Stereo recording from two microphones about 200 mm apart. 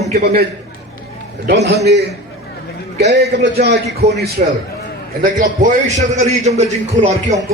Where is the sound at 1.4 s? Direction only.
55° right (ahead or behind); by 6.6 s 35° right (ahead or behind).